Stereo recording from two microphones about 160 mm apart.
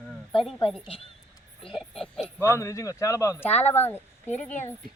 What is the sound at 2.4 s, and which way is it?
A man's voice, 15° left (ahead or behind).